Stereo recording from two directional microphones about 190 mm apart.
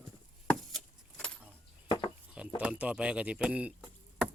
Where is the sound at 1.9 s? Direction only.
25° left (ahead or behind).